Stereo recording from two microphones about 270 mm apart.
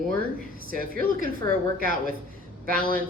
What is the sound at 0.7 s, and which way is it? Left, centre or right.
Speech, right.